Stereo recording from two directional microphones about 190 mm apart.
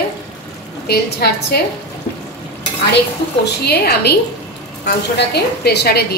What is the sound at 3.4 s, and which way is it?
Speech, 60° left (ahead or behind).